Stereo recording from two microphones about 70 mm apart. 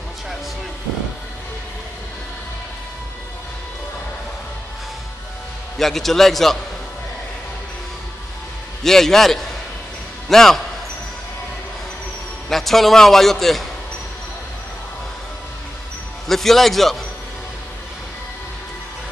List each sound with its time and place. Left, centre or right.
5.8 s a man's voice: centre
8.8 s a man's voice: centre
12.4 s a man's voice: centre
16.3 s a man's voice: centre